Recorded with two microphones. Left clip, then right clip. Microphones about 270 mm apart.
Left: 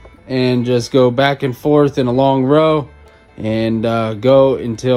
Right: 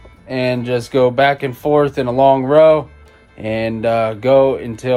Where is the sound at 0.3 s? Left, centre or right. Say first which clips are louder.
Left 2 dB; left.